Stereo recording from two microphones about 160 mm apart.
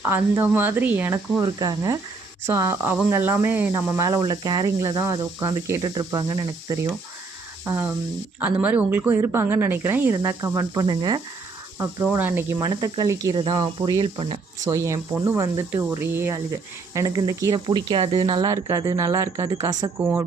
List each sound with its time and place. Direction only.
0.0 s speech: 15° right (ahead or behind)
7.6 s speech: 15° right (ahead or behind)
12.1 s speech: 15° right (ahead or behind); by 14.4 s 35° right (ahead or behind)
14.6 s speech: 20° right (ahead or behind)
20.0 s speech: 10° right (ahead or behind)